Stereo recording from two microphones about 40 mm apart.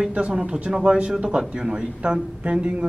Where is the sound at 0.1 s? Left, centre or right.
Right.